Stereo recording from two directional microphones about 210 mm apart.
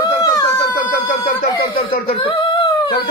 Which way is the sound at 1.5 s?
20° left (ahead or behind).